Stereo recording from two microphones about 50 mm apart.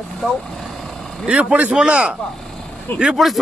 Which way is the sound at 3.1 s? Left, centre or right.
Centre.